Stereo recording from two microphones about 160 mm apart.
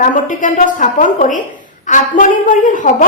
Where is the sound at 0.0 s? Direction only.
55° left (ahead or behind).